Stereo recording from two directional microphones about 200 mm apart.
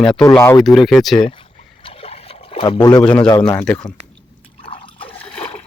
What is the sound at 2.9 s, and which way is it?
Speech, 5° left (ahead or behind).